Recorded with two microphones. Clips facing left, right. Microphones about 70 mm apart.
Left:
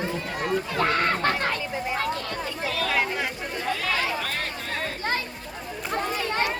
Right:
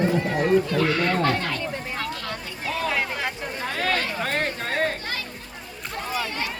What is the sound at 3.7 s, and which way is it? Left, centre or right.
Chatter, right.